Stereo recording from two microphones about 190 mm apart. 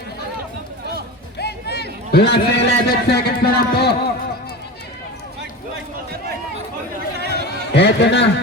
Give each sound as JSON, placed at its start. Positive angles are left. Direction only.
{"t": 1.4, "sound": "a man's voice", "side_deg": 60}
{"t": 7.2, "sound": "chatter", "side_deg": -60}
{"t": 7.4, "sound": "a man's voice", "side_deg": 65}